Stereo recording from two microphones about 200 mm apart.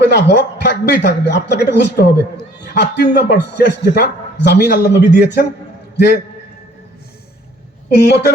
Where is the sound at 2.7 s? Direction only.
60° left (ahead or behind).